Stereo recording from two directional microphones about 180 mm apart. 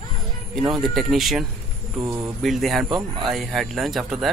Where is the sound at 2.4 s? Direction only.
Centre (ahead or behind).